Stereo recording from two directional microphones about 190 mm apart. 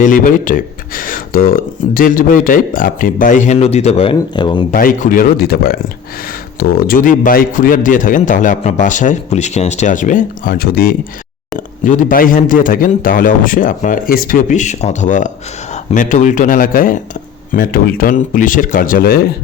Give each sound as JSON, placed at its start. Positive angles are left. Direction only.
{"t": 0.0, "sound": "a man's voice", "side_deg": 45}
{"t": 4.7, "sound": "a man's voice", "side_deg": 45}